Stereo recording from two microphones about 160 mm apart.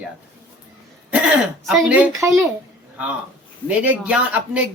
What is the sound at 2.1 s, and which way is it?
Speech, 20° right (ahead or behind).